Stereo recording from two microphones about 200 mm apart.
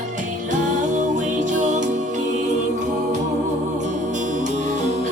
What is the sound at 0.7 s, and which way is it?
Music, 40° right (ahead or behind).